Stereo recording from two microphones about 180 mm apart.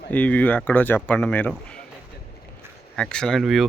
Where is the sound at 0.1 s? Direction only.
10° left (ahead or behind).